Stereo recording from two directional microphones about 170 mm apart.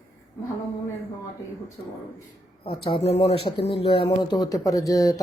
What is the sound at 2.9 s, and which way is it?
Speech, 35° left (ahead or behind).